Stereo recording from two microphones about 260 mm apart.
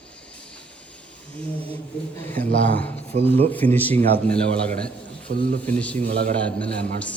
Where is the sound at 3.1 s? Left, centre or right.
Right.